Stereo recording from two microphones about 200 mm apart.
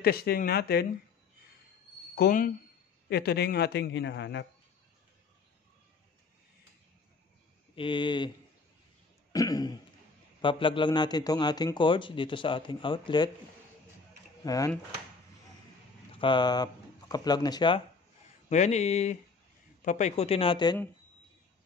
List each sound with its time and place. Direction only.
0.0 s speech: 50° left (ahead or behind)
2.1 s a man's voice: 45° left (ahead or behind)
7.7 s speech: 25° left (ahead or behind)
9.3 s speech: 20° left (ahead or behind)
14.4 s speech: 15° left (ahead or behind)
16.1 s speech: 25° left (ahead or behind)
18.5 s speech: 35° left (ahead or behind)